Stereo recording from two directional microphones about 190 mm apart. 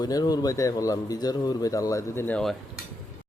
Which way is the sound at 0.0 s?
20° left (ahead or behind).